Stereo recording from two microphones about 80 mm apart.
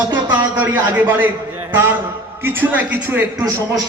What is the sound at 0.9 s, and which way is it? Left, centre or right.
Speech, right.